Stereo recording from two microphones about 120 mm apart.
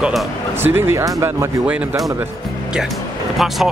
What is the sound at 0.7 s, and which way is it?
Speech, 20° right (ahead or behind).